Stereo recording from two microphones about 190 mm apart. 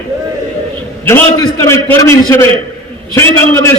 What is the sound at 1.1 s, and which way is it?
A man's voice, 15° left (ahead or behind).